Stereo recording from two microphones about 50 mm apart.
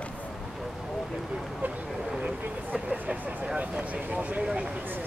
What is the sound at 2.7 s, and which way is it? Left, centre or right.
Vehicle, right.